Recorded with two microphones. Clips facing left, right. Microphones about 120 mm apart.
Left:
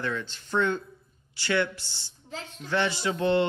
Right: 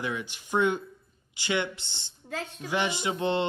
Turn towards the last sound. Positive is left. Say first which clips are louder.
# left 3 dB
turn(degrees=-20)  # may be behind; listen again after turning